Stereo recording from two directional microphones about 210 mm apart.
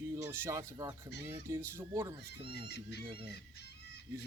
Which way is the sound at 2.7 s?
50° left (ahead or behind).